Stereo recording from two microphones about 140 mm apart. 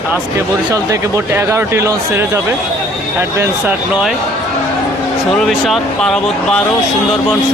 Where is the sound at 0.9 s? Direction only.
20° right (ahead or behind).